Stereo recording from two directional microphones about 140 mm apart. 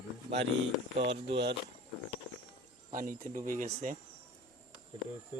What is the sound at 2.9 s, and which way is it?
Speech, 70° right (ahead or behind).